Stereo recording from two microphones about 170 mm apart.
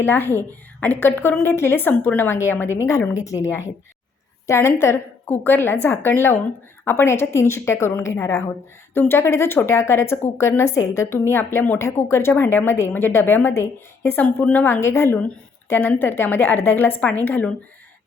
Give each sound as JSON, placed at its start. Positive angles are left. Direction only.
{"t": 0.0, "sound": "a woman's voice", "side_deg": 15}
{"t": 4.4, "sound": "a woman's voice", "side_deg": 15}